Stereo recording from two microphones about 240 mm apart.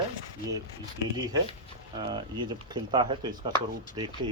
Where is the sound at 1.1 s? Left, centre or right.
Centre.